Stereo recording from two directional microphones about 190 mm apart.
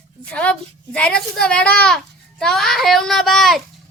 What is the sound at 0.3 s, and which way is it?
A child's voice, 5° left (ahead or behind).